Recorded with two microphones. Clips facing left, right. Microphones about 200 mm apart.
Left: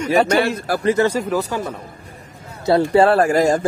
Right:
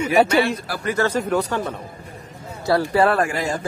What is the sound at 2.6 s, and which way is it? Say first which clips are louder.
Speech: left 4 dB; 25° left (ahead or behind).